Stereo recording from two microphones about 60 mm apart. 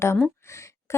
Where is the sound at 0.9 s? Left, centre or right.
Left.